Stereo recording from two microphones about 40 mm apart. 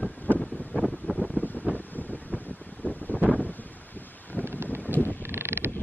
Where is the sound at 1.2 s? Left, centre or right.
Left.